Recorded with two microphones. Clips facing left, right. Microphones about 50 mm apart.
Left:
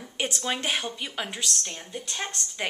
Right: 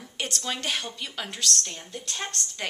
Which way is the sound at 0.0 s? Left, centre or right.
Centre.